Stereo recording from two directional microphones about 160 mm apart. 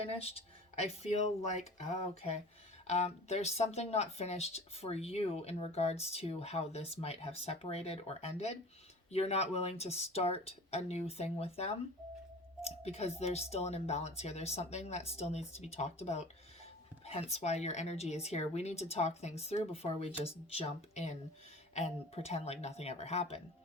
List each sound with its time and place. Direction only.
0.2 s speech: 40° left (ahead or behind)